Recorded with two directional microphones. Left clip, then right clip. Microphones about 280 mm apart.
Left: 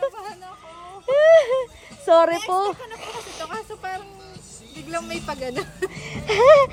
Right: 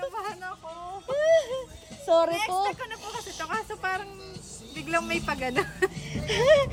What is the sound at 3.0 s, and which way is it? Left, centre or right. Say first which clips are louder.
Snake: left 6 dB; centre.